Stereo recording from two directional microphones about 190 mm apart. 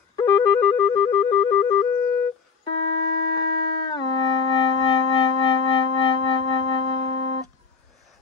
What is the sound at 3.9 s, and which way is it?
Music, 25° left (ahead or behind).